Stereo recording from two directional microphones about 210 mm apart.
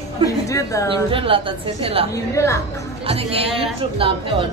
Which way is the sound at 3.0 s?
25° right (ahead or behind).